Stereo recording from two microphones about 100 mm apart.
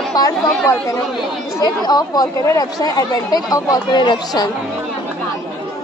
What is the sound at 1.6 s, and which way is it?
Speech, 40° left (ahead or behind).